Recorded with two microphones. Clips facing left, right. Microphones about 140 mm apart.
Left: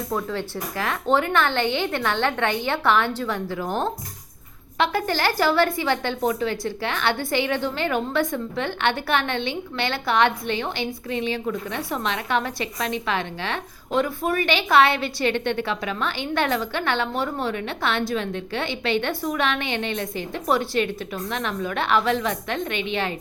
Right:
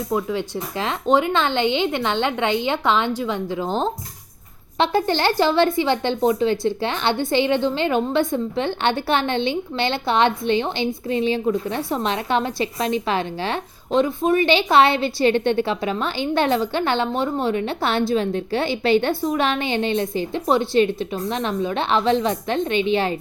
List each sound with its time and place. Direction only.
0.1 s a woman's voice: 15° right (ahead or behind); by 23.1 s 35° right (ahead or behind)